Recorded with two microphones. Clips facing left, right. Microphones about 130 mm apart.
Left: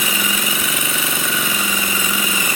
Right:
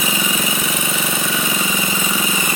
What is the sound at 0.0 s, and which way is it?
Engine, 20° right (ahead or behind).